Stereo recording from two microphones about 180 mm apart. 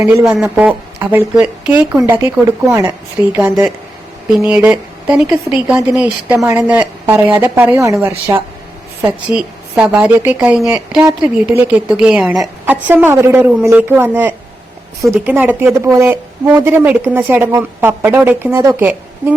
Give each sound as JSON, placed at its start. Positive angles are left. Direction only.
{"t": 0.0, "sound": "a woman's voice", "side_deg": -15}
{"t": 4.4, "sound": "a woman's voice", "side_deg": -5}
{"t": 9.0, "sound": "a woman's voice", "side_deg": -5}